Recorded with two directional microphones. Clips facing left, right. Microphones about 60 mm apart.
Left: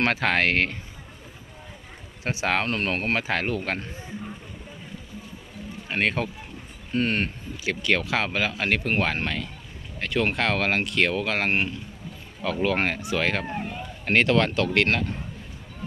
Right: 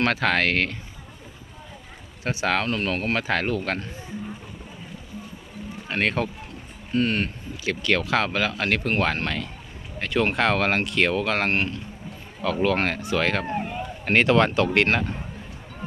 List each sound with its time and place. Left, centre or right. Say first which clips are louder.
0.0 s speech: right 1 dB; centre
2.2 s speech: right 1 dB; left
2.6 s speech: right 1 dB; left
3.2 s speech: right 2 dB; centre
5.9 s speech: right 1 dB; centre
6.9 s speech: right 1 dB; left
7.6 s speech: right 1 dB; centre
12.6 s speech: right 1 dB; centre
14.0 s speech: right 2 dB; centre